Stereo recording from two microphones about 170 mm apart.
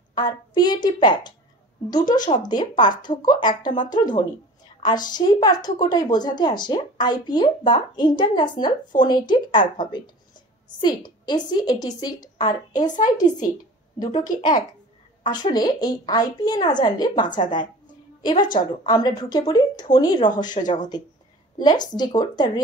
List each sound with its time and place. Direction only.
0.1 s a woman's voice: 25° left (ahead or behind)
12.7 s speech: 50° left (ahead or behind)
13.9 s a woman's voice: 25° left (ahead or behind)
21.6 s a woman's voice: 25° left (ahead or behind)